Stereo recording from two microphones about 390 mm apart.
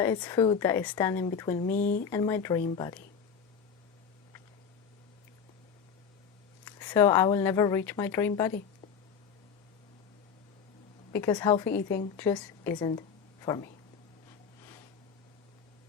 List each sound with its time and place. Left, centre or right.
0.0 s a woman's voice: centre
2.0 s a woman's voice: centre
6.7 s a woman's voice: centre
11.1 s a woman's voice: centre